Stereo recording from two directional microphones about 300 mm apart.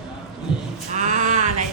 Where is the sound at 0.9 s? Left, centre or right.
Right.